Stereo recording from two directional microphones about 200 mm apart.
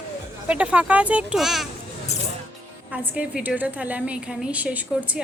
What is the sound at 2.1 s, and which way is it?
Music, 35° left (ahead or behind).